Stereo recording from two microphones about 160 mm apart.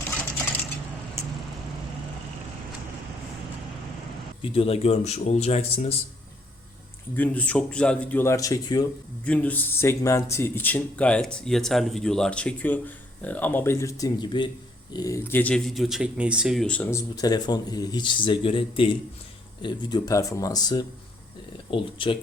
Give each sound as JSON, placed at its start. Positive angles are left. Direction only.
{"t": 4.4, "sound": "speech", "side_deg": 35}
{"t": 7.2, "sound": "speech", "side_deg": 10}
{"t": 9.2, "sound": "speech", "side_deg": 10}
{"t": 17.2, "sound": "speech", "side_deg": 25}